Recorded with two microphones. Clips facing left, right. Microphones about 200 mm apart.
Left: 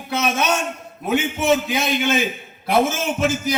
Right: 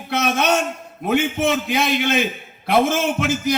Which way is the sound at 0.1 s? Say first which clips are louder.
Right 1 dB; 60° right (ahead or behind).